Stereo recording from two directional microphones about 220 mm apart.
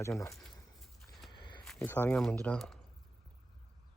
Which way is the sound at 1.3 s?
20° left (ahead or behind).